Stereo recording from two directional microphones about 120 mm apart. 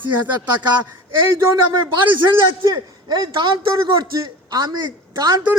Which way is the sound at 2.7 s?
40° right (ahead or behind).